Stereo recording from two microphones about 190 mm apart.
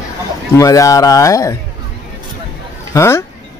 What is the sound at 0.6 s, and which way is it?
Speech, 15° left (ahead or behind).